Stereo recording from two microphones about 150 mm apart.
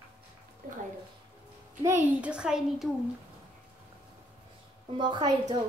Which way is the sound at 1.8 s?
10° right (ahead or behind).